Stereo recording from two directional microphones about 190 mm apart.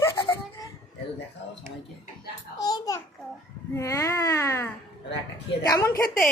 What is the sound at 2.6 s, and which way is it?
A child's voice, 20° left (ahead or behind).